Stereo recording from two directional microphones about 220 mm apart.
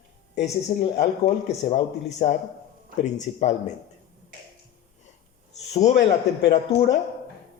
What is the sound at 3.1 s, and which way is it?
Speech, 30° left (ahead or behind).